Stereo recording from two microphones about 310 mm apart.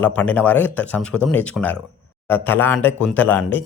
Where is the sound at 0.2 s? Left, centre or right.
Centre.